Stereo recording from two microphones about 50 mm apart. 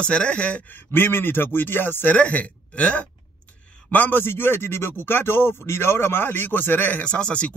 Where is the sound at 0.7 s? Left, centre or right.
Left.